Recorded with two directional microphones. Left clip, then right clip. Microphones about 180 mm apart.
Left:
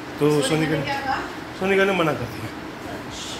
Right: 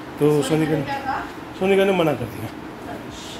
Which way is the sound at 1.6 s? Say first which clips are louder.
Right 2 dB; 40° right (ahead or behind).